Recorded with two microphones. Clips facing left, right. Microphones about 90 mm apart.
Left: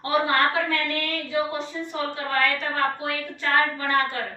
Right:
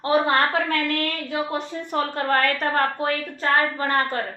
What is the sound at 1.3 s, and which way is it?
A woman's voice, 50° right (ahead or behind).